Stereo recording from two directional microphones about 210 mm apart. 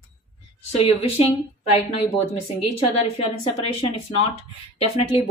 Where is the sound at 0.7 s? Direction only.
25° left (ahead or behind).